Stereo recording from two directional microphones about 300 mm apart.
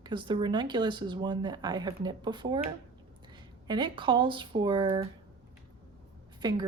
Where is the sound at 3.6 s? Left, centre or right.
Centre.